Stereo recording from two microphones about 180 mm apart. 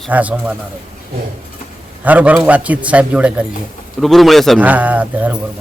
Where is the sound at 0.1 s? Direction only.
10° right (ahead or behind).